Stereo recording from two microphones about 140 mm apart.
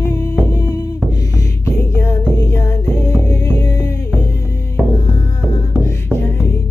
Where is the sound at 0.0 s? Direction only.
20° left (ahead or behind).